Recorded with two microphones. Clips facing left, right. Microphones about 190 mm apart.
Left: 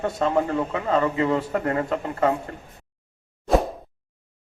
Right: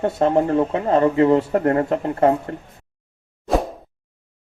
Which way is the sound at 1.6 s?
45° right (ahead or behind).